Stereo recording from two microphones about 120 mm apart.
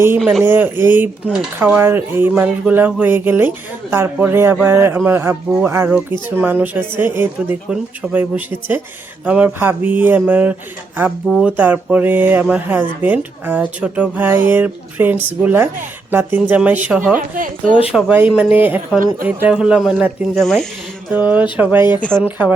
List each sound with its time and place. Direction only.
0.2 s speech: centre (ahead or behind)
0.4 s speech: 20° right (ahead or behind)
11.3 s speech: centre (ahead or behind)
11.5 s speech: 15° right (ahead or behind)
17.3 s speech: 90° right
17.9 s speech: 10° right (ahead or behind); by 20.7 s 5° left (ahead or behind)
21.1 s speech: 15° right (ahead or behind)